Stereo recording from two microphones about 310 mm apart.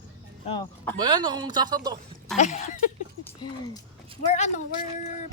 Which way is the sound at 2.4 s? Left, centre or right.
Left.